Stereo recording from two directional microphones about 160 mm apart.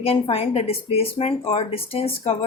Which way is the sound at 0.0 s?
35° left (ahead or behind).